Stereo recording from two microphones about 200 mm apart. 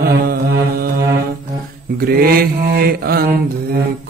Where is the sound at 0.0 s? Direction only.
50° right (ahead or behind).